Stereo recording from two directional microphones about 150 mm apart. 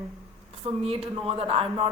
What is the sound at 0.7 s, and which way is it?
A woman's voice, 40° right (ahead or behind).